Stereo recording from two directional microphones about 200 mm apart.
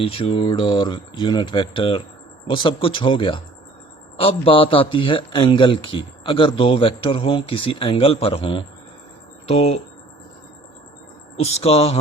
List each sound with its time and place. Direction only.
0.0 s a man's voice: 30° left (ahead or behind)
11.5 s a man's voice: 30° left (ahead or behind)